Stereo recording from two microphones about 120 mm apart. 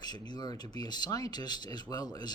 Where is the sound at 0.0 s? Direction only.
35° left (ahead or behind).